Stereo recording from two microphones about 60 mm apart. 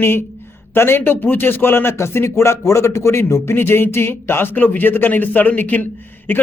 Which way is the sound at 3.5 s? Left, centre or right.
Left.